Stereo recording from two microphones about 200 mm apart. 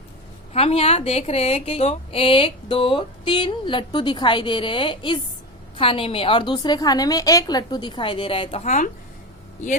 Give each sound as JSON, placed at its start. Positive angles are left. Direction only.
{"t": 0.5, "sound": "a woman's voice", "side_deg": 30}